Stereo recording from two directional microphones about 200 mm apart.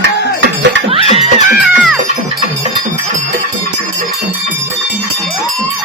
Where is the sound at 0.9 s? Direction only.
30° right (ahead or behind).